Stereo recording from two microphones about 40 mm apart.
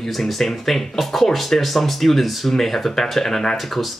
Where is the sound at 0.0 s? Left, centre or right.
Centre.